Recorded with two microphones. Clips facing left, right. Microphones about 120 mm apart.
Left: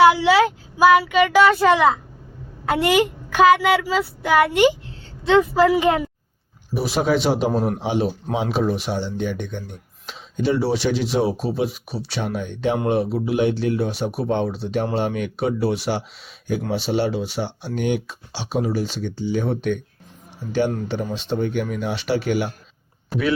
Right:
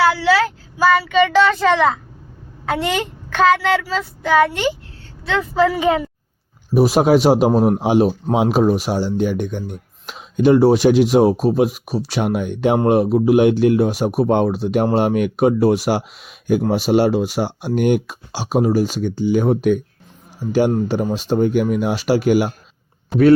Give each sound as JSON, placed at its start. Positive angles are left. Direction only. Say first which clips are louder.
{"t": 0.0, "sound": "a woman's voice", "louder": "left 2 dB", "side_deg": 20}
{"t": 5.5, "sound": "speech", "louder": "even", "side_deg": 5}
{"t": 6.7, "sound": "speech", "louder": "right 7 dB", "side_deg": -45}
{"t": 12.2, "sound": "speech", "louder": "right 5 dB", "side_deg": -60}